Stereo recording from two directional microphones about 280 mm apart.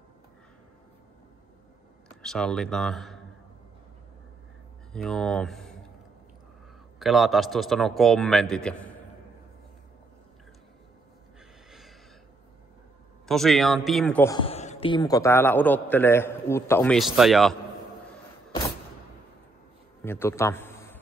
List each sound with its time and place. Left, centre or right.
2.2 s a man's voice: centre
4.9 s speech: centre
7.0 s a man's voice: centre
13.3 s a man's voice: centre
20.0 s a sound: centre